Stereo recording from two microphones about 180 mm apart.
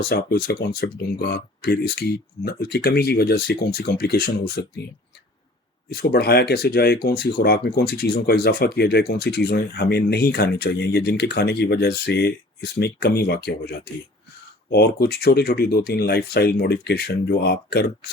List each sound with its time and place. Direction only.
0.0 s speech: 60° left (ahead or behind)
5.9 s speech: 60° left (ahead or behind)